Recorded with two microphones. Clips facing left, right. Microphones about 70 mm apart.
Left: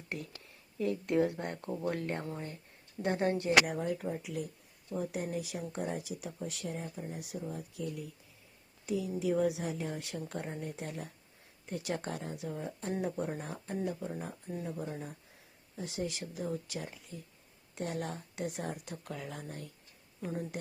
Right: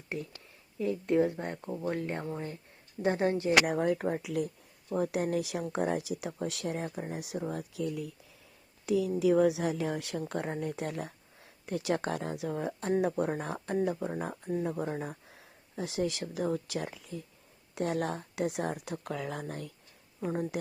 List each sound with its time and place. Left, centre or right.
0.8 s speech: centre
1.8 s speech: right
3.0 s speech: right
3.7 s a woman's voice: right
8.9 s a woman's voice: right
15.8 s speech: right